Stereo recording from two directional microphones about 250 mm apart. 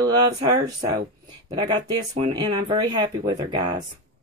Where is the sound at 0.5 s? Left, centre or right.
Centre.